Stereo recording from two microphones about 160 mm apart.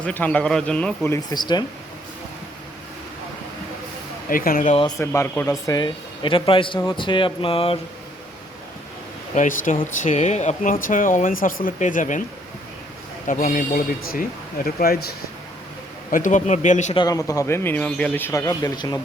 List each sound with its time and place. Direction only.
0.0 s speech: 10° left (ahead or behind)
1.3 s a man's voice: 25° left (ahead or behind)
4.3 s speech: 60° left (ahead or behind)
4.9 s a man's voice: 15° left (ahead or behind); by 7.8 s 35° left (ahead or behind)
9.3 s speech: 55° left (ahead or behind)
13.2 s speech: 55° left (ahead or behind)
16.1 s speech: 50° left (ahead or behind)
16.9 s speech: 25° left (ahead or behind)